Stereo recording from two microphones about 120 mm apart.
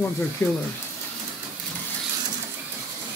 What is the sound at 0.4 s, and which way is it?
Speech, 5° left (ahead or behind).